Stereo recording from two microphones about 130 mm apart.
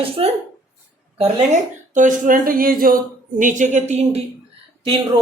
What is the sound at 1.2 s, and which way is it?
Speech, 65° right (ahead or behind).